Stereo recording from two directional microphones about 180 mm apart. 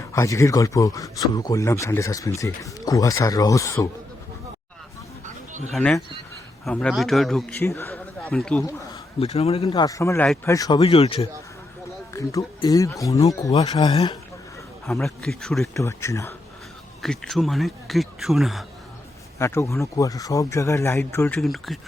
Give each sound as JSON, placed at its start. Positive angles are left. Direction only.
{"t": 0.0, "sound": "speech", "side_deg": 15}
{"t": 5.7, "sound": "speech", "side_deg": 5}
{"t": 7.6, "sound": "a man's voice", "side_deg": 15}
{"t": 9.1, "sound": "speech", "side_deg": 35}
{"t": 9.8, "sound": "speech", "side_deg": 15}
{"t": 12.1, "sound": "speech", "side_deg": 20}
{"t": 14.8, "sound": "speech", "side_deg": 0}
{"t": 15.7, "sound": "speech", "side_deg": 15}
{"t": 17.0, "sound": "speech", "side_deg": 0}
{"t": 19.4, "sound": "speech", "side_deg": 15}